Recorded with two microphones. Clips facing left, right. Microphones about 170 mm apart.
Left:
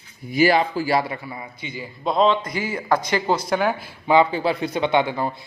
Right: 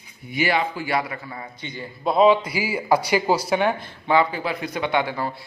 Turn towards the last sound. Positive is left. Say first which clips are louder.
# left 3 dB
turn(degrees=20)  # may be behind; listen again after turning